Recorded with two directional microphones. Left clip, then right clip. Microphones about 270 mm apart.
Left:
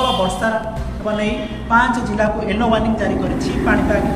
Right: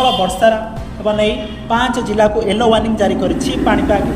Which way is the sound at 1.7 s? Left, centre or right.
Centre.